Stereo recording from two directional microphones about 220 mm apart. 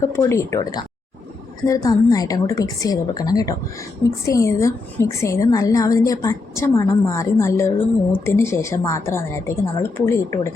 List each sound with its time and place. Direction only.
0.0 s a woman's voice: 10° left (ahead or behind)